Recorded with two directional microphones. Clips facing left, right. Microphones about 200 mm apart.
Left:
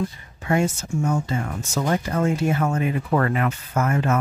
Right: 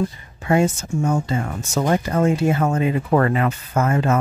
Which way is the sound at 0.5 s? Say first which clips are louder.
Right 4 dB; 30° right (ahead or behind).